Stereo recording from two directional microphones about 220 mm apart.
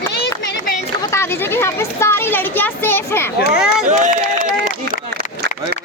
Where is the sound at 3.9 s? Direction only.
35° right (ahead or behind).